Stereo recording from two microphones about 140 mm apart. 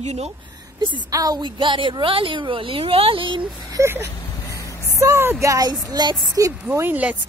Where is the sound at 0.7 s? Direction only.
30° right (ahead or behind).